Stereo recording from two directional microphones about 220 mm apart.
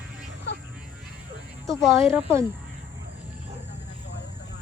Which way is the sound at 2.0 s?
10° right (ahead or behind).